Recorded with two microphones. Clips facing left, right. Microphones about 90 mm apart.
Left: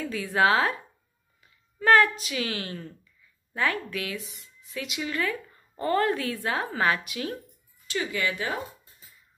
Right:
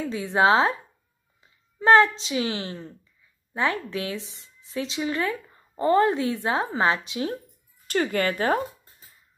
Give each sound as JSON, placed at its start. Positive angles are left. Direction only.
{"t": 0.0, "sound": "a woman's voice", "side_deg": -25}
{"t": 7.8, "sound": "speech", "side_deg": -50}